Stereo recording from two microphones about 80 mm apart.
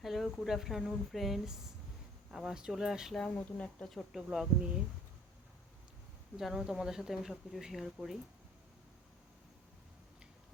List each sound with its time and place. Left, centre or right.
0.0 s insect: centre
0.4 s speech: centre
3.2 s speech: centre
3.8 s speech: centre
6.3 s speech: centre